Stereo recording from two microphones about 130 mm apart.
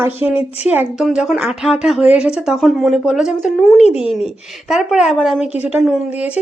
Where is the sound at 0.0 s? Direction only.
15° right (ahead or behind).